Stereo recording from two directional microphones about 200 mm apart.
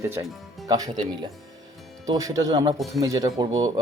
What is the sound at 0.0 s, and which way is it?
Speech, 15° right (ahead or behind).